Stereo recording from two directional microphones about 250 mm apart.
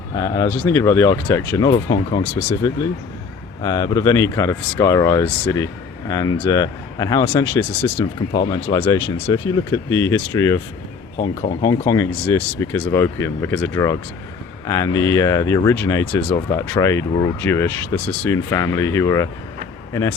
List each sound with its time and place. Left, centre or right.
0.2 s speech: centre
8.3 s speech: centre
11.6 s speech: centre